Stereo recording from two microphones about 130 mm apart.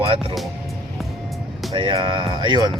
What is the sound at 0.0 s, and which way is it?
Speech, 45° right (ahead or behind).